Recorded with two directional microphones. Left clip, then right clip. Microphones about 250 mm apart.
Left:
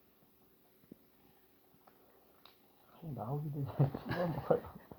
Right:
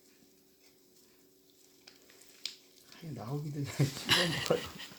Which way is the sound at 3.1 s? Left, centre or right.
Right.